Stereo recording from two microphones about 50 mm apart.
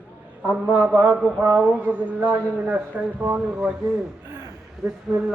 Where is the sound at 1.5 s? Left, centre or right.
Right.